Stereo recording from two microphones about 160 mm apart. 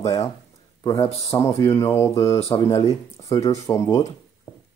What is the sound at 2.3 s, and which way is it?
Speech, 40° left (ahead or behind).